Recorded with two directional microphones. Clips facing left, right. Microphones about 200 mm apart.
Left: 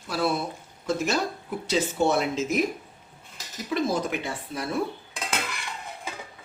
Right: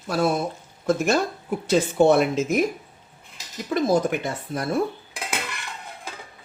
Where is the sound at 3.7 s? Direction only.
45° right (ahead or behind).